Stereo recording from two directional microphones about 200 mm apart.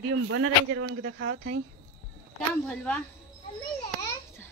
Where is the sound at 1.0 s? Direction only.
60° right (ahead or behind).